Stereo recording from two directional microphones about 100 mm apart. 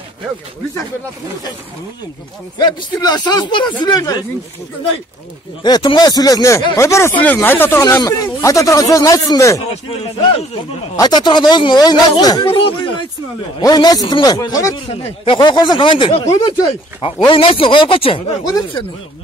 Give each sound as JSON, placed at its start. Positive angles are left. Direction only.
{"t": 2.6, "sound": "speech", "side_deg": 45}
{"t": 5.6, "sound": "speech", "side_deg": 50}
{"t": 8.0, "sound": "speech", "side_deg": 35}
{"t": 9.7, "sound": "speech", "side_deg": 65}
{"t": 11.0, "sound": "speech", "side_deg": 45}
{"t": 12.4, "sound": "speech", "side_deg": 60}
{"t": 13.6, "sound": "speech", "side_deg": 40}
{"t": 14.9, "sound": "speech", "side_deg": 70}
{"t": 15.3, "sound": "speech", "side_deg": 50}
{"t": 16.3, "sound": "speech", "side_deg": 40}
{"t": 17.2, "sound": "speech", "side_deg": 55}